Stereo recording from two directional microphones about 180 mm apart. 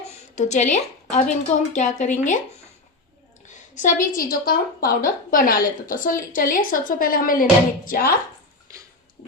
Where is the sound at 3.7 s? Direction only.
45° left (ahead or behind).